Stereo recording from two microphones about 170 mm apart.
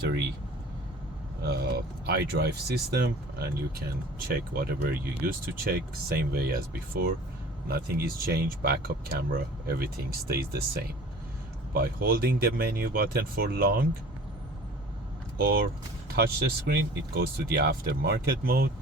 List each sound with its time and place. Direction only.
1.5 s speech: 70° right (ahead or behind)
15.4 s speech: 65° right (ahead or behind)